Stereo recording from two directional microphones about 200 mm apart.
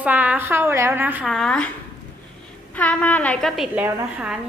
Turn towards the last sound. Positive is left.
turn(degrees=-5)  # may be behind; listen again after turning